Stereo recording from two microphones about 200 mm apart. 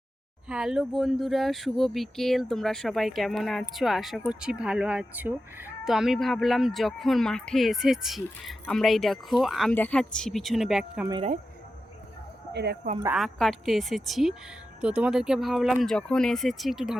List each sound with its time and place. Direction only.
0.4 s speech: 5° right (ahead or behind)
13.1 s speech: centre (ahead or behind)